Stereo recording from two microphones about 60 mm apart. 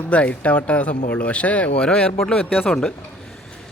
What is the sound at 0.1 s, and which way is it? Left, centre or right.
A man's voice, left.